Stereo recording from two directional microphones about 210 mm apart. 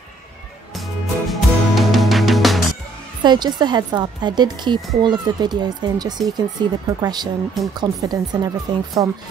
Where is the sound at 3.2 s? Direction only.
20° right (ahead or behind).